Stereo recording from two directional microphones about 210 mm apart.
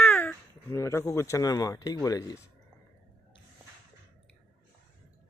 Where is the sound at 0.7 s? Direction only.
15° left (ahead or behind).